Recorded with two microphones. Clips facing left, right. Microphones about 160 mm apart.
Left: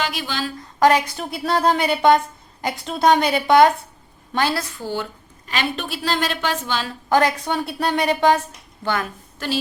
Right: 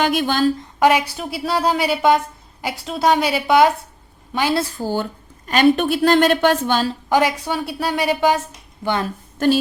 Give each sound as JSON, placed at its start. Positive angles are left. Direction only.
{"t": 0.0, "sound": "a woman's voice", "side_deg": -50}
{"t": 0.8, "sound": "a woman's voice", "side_deg": -10}
{"t": 4.5, "sound": "a woman's voice", "side_deg": -35}
{"t": 7.1, "sound": "a woman's voice", "side_deg": -10}
{"t": 8.8, "sound": "a woman's voice", "side_deg": -20}